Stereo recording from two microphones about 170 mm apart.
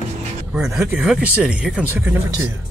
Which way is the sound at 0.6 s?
5° right (ahead or behind).